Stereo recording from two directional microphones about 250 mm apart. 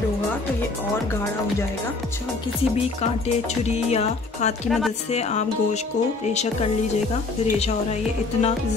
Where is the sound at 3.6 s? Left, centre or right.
Left.